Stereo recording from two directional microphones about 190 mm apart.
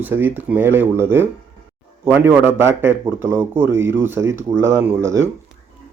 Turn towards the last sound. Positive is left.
turn(degrees=-15)  # may be behind; listen again after turning